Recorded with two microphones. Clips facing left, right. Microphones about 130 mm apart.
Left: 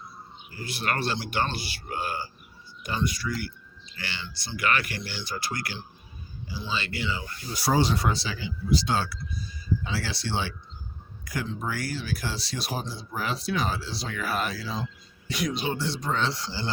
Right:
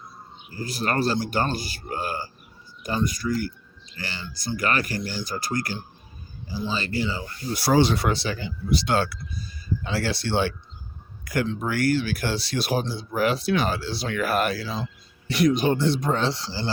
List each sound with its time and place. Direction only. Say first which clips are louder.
0.5 s speech: right 5 dB; 40° right (ahead or behind)
7.5 s speech: right 4 dB; 75° right (ahead or behind); by 10.5 s 60° right (ahead or behind)
11.3 s speech: right 6 dB; 70° right (ahead or behind)
15.3 s speech: right 9 dB; 55° right (ahead or behind)
16.2 s speech: right 3 dB; 30° right (ahead or behind)